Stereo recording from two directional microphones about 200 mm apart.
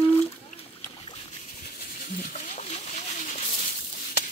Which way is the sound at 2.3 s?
35° left (ahead or behind).